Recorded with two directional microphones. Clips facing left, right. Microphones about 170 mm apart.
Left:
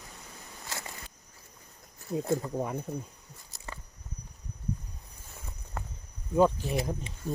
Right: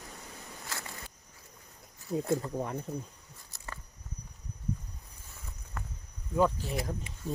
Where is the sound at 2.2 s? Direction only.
10° left (ahead or behind).